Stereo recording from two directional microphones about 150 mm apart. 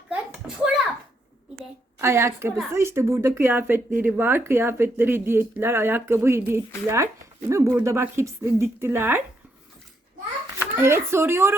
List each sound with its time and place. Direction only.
0.1 s a sound: 5° right (ahead or behind)
2.0 s speech: 15° right (ahead or behind)
10.6 s speech: 15° right (ahead or behind)